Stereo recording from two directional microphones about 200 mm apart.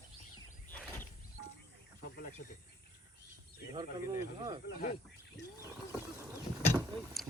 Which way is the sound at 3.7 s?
20° right (ahead or behind).